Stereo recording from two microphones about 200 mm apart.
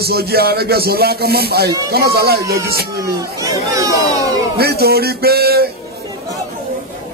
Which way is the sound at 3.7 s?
15° right (ahead or behind).